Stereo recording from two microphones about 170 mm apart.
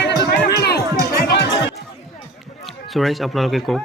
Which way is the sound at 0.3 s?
70° left (ahead or behind).